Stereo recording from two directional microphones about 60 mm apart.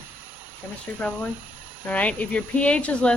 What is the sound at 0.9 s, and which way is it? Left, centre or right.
A woman's voice, left.